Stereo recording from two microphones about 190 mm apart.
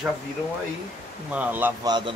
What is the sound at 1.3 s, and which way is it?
Speech, 10° right (ahead or behind).